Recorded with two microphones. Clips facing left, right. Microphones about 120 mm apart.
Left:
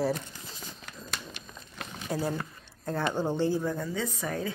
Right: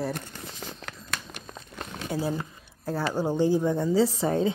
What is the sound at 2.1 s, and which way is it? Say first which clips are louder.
A woman's voice: right 2 dB; 5° right (ahead or behind).